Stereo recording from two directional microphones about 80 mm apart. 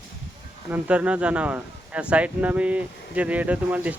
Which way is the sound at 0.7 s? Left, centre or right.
Centre.